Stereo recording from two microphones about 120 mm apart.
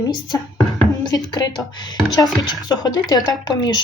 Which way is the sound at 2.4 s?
35° left (ahead or behind).